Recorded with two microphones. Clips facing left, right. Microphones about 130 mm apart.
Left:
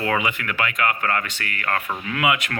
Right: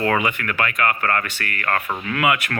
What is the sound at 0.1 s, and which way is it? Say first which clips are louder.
Speech: right 2 dB; 15° left (ahead or behind).